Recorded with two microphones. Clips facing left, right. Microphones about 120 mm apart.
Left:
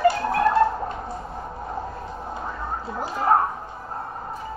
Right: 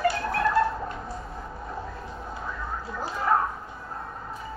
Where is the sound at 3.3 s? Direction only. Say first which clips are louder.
Left 4 dB; 40° left (ahead or behind).